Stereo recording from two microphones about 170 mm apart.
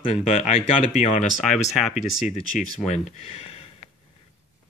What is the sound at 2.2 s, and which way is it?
Speech, 40° left (ahead or behind).